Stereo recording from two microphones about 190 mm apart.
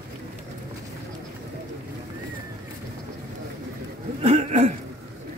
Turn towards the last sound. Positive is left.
turn(degrees=-35)  # may be behind; listen again after turning